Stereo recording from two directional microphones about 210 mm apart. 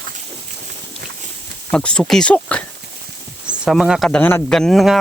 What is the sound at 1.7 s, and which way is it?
Speech, 5° left (ahead or behind).